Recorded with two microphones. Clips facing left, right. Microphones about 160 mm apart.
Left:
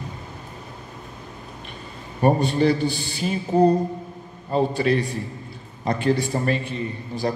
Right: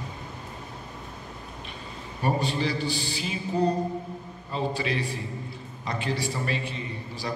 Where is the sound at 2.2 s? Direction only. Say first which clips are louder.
Left 8 dB; 50° left (ahead or behind).